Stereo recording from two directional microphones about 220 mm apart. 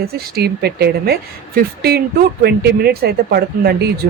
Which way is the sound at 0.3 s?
45° right (ahead or behind).